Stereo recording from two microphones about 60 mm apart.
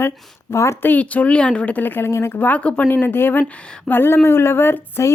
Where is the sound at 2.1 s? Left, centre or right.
Left.